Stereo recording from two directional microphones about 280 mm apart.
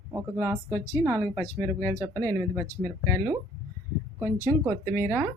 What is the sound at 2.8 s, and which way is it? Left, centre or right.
Speech, centre.